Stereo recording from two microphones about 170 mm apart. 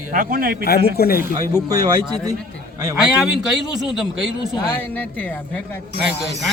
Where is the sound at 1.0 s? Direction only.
60° left (ahead or behind).